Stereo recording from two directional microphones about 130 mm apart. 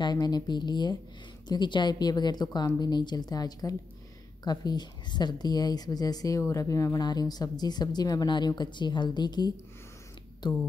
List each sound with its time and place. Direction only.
0.0 s a woman's voice: 30° left (ahead or behind)